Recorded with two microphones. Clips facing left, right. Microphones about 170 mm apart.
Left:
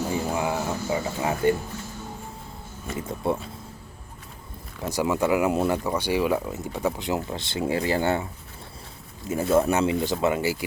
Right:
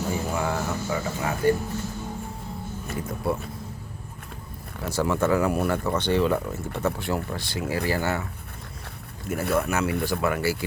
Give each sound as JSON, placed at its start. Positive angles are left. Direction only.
{"t": 0.3, "sound": "a sound", "side_deg": 15}
{"t": 2.9, "sound": "speech", "side_deg": 20}
{"t": 4.9, "sound": "speech", "side_deg": 15}
{"t": 9.2, "sound": "speech", "side_deg": -60}
{"t": 9.5, "sound": "speech", "side_deg": 25}